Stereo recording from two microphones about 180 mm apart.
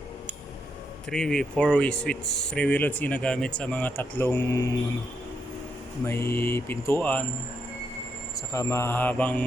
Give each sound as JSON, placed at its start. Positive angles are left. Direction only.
{"t": 1.1, "sound": "speech", "side_deg": 5}
{"t": 6.1, "sound": "speech", "side_deg": 15}
{"t": 8.5, "sound": "speech", "side_deg": 15}